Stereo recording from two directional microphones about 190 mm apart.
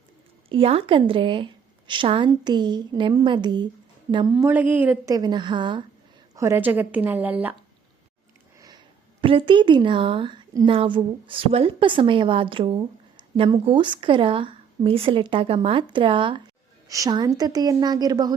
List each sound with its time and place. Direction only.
0.4 s a woman's voice: 30° right (ahead or behind)
4.4 s a woman's voice: 10° right (ahead or behind); by 5.8 s 25° right (ahead or behind)
6.3 s a woman's voice: 15° right (ahead or behind)
8.5 s a sound: 20° right (ahead or behind)
9.2 s a woman's voice: 25° right (ahead or behind)